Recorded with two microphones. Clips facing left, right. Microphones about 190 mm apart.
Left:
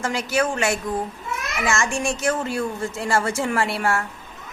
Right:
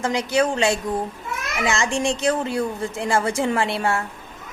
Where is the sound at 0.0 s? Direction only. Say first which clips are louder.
Right 2 dB; 20° right (ahead or behind).